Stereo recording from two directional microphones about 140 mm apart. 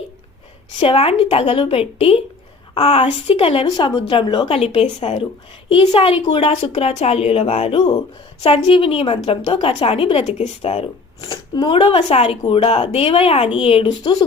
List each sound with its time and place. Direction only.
0.8 s a woman's voice: 40° left (ahead or behind)